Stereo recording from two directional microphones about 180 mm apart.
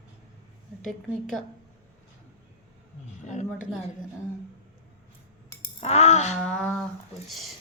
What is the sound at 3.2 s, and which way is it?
Speech, 40° left (ahead or behind).